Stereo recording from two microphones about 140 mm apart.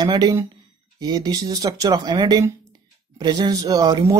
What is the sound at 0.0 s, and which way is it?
Speech, 30° right (ahead or behind).